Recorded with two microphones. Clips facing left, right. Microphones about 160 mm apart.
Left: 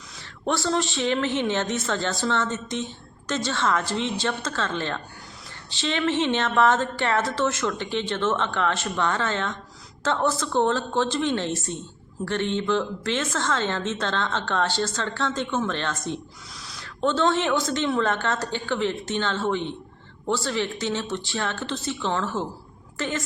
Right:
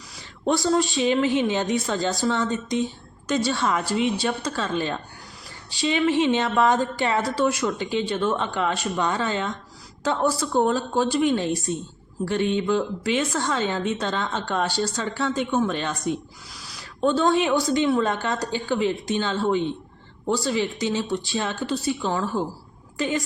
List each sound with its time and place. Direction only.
0.4 s speech: 15° right (ahead or behind)